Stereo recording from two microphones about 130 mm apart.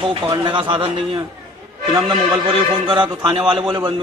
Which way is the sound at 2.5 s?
35° right (ahead or behind).